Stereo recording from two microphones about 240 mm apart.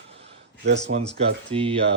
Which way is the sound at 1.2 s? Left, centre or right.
Right.